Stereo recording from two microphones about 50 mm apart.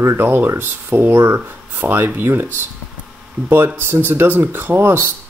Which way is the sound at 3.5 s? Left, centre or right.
Right.